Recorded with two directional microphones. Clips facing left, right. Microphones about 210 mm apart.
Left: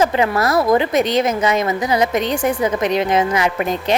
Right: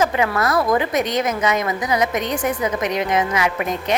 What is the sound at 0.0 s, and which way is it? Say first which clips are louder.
A woman's voice: left 3 dB; 30° left (ahead or behind).